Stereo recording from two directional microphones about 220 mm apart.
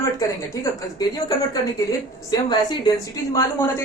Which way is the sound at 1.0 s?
20° left (ahead or behind).